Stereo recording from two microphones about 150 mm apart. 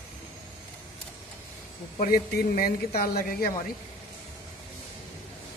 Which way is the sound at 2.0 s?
90° left.